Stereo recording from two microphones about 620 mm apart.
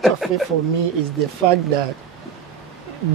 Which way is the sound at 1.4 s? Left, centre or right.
Right.